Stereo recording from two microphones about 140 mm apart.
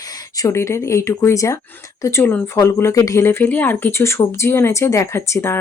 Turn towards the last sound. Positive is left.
turn(degrees=20)  # may be behind; listen again after turning